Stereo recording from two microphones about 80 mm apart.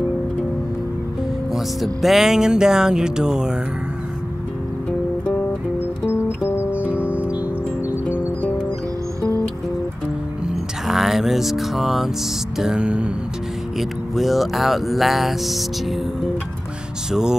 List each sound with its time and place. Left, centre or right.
1.5 s music: centre
6.0 s music: left
6.7 s music: centre
10.5 s music: centre
13.7 s speech: centre
17.1 s music: centre